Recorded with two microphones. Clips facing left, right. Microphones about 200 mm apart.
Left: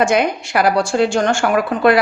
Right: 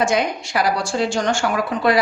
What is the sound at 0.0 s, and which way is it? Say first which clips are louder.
A woman's voice: left 4 dB; 60° left (ahead or behind).